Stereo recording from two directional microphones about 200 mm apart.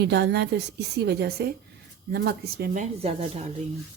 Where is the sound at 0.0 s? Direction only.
55° right (ahead or behind).